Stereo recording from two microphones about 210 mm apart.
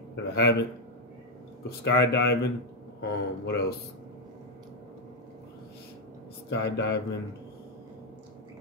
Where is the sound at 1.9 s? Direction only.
55° left (ahead or behind).